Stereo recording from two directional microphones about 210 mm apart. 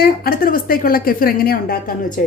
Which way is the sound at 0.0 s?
45° left (ahead or behind).